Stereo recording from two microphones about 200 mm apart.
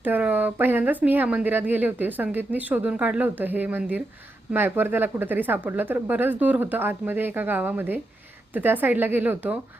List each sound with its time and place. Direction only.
0.0 s speech: 10° right (ahead or behind)